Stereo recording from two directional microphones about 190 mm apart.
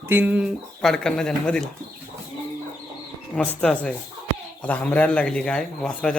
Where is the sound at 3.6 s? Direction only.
5° left (ahead or behind).